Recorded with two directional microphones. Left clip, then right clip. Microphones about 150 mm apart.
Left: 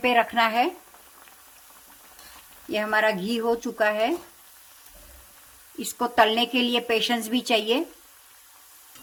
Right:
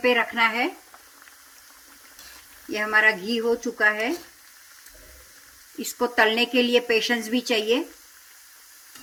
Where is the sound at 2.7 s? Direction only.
40° left (ahead or behind).